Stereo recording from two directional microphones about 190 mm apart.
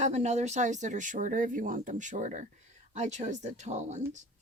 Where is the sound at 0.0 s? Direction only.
35° right (ahead or behind).